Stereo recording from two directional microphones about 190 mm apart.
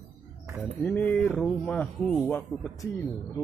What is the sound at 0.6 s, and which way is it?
Speech, 5° left (ahead or behind).